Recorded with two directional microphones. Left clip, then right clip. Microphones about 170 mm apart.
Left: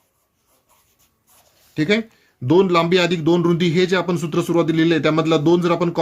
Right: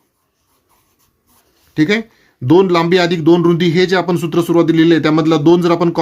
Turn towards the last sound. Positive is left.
turn(degrees=-25)  # may be behind; listen again after turning